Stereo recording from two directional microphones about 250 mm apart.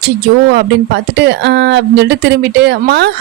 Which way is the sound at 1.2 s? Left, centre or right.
Right.